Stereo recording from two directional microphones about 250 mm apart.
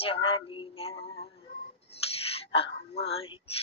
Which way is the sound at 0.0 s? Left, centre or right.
Left.